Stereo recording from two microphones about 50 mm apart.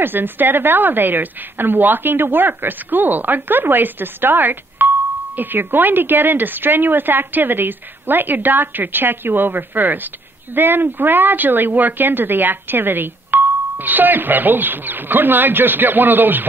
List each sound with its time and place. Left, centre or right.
0.0 s a woman's voice: right